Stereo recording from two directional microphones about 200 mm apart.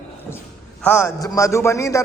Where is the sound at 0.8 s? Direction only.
10° left (ahead or behind).